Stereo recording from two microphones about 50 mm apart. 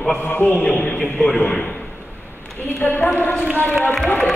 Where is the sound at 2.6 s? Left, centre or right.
Left.